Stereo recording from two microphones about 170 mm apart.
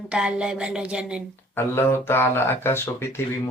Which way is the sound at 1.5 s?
15° left (ahead or behind).